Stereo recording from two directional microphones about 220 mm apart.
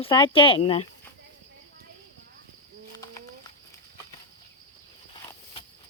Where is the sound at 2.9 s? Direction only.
15° left (ahead or behind).